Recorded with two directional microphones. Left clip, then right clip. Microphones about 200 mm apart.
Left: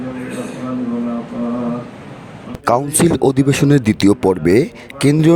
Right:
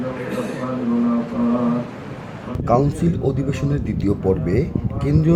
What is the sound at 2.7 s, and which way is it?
Speech, 55° left (ahead or behind).